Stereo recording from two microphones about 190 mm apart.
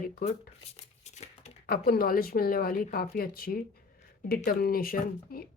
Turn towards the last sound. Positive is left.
turn(degrees=50)  # may be behind; listen again after turning